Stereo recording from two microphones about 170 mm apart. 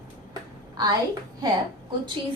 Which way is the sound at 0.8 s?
25° right (ahead or behind).